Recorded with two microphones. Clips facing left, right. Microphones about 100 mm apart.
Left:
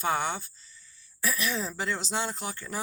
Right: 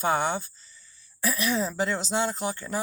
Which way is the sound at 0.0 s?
25° right (ahead or behind).